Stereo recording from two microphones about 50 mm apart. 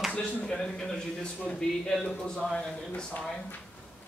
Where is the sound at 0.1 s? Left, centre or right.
Left.